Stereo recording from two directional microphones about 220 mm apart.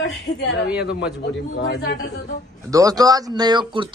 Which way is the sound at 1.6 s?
50° left (ahead or behind).